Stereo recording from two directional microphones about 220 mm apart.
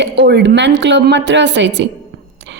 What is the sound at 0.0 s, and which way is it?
A woman's voice, 50° right (ahead or behind).